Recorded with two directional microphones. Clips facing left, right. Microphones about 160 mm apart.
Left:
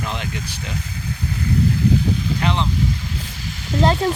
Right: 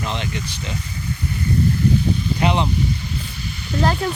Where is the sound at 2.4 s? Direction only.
15° right (ahead or behind).